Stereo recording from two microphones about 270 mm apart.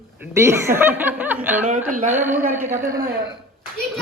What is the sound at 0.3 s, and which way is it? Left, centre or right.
Speech, centre.